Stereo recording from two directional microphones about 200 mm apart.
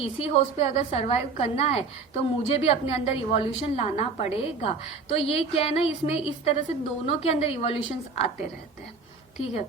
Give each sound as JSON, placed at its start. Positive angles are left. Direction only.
{"t": 0.0, "sound": "a woman's voice", "side_deg": 30}